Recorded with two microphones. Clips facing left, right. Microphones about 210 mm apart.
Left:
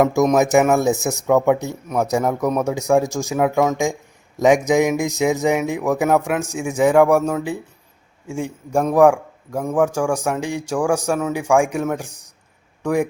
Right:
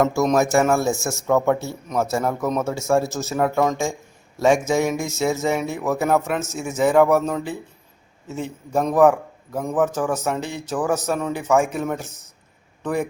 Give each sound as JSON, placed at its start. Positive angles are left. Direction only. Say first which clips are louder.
{"t": 0.0, "sound": "a man's voice", "louder": "left 3 dB", "side_deg": 15}